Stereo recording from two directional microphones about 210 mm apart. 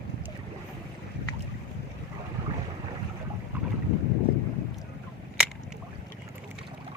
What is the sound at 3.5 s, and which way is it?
Boat, 10° right (ahead or behind).